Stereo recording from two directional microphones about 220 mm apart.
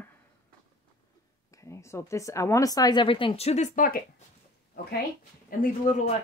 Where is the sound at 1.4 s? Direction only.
15° left (ahead or behind); by 4.2 s 40° left (ahead or behind).